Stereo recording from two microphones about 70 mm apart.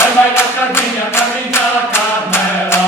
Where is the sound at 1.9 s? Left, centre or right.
Left.